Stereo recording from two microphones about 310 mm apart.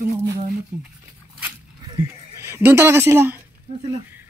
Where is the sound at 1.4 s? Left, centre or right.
Centre.